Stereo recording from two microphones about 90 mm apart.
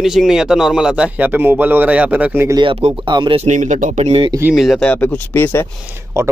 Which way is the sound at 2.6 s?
70° right (ahead or behind).